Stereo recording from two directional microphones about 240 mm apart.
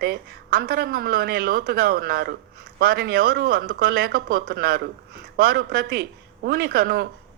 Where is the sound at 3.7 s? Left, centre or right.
Right.